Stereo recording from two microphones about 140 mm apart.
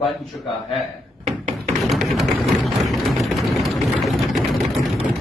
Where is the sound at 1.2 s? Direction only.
50° right (ahead or behind).